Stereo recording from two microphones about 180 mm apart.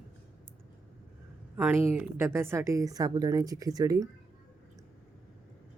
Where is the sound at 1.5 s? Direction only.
10° right (ahead or behind).